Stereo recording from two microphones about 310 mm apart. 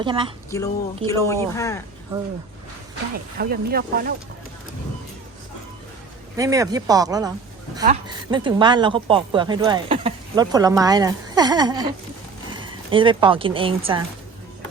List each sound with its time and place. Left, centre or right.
0.0 s a woman's voice: centre
0.5 s speech: centre
3.3 s speech: right
6.3 s a woman's voice: centre